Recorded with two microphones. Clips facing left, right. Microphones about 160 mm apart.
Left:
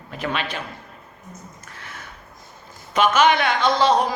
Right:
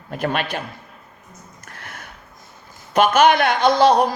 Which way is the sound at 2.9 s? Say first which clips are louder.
Right 3 dB; 55° right (ahead or behind).